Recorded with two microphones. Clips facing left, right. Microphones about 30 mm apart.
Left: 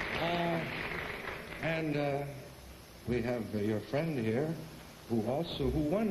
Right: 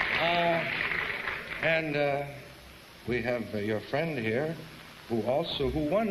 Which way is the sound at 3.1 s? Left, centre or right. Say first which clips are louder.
Right 4 dB; right.